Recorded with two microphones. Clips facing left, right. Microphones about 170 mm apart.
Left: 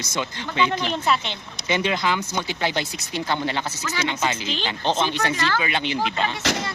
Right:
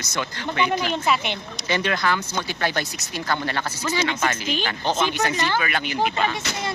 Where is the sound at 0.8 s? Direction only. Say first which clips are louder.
Even; 5° right (ahead or behind).